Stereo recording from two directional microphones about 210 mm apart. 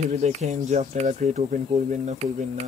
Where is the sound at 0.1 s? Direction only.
35° right (ahead or behind).